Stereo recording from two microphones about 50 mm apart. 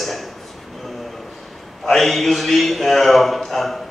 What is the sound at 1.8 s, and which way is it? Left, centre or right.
A man's voice, centre.